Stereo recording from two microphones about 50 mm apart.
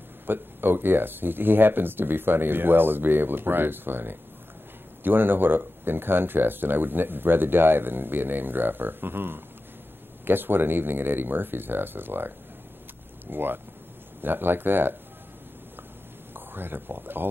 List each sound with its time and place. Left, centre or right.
0.3 s speech: right
13.3 s speech: right
16.3 s speech: right